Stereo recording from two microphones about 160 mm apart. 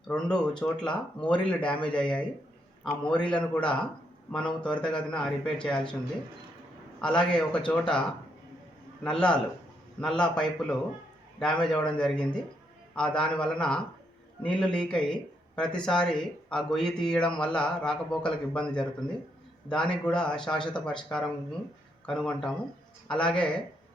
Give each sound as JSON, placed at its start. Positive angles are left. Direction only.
{"t": 0.1, "sound": "speech", "side_deg": 5}
{"t": 7.0, "sound": "speech", "side_deg": 5}
{"t": 9.0, "sound": "speech", "side_deg": 5}
{"t": 22.0, "sound": "speech", "side_deg": 5}